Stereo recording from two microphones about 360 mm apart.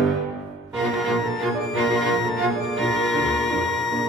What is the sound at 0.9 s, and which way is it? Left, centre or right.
Music, centre.